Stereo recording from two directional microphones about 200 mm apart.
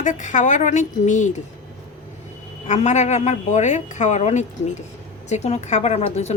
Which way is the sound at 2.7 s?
35° left (ahead or behind).